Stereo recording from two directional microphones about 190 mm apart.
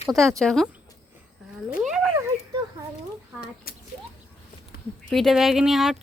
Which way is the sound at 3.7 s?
50° left (ahead or behind).